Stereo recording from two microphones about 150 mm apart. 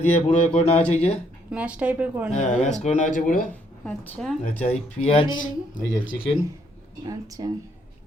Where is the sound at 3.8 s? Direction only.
5° left (ahead or behind).